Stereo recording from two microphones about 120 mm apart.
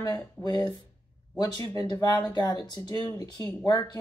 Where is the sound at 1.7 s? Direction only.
35° left (ahead or behind).